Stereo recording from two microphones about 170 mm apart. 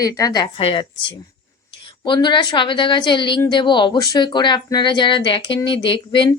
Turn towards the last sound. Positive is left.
turn(degrees=30)  # may be behind; listen again after turning